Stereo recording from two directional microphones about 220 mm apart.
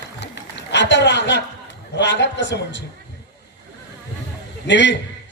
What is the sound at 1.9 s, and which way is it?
Speech, 50° left (ahead or behind).